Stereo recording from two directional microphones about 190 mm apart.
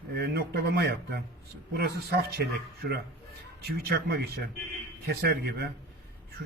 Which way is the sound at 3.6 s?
55° right (ahead or behind).